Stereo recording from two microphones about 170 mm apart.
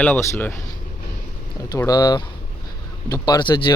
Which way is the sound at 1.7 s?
20° left (ahead or behind).